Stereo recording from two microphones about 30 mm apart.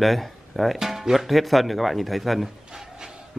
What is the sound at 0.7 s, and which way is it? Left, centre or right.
Speech, centre.